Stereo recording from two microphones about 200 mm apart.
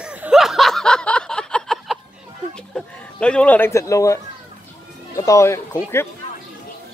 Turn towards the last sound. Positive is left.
turn(degrees=15)  # may be behind; listen again after turning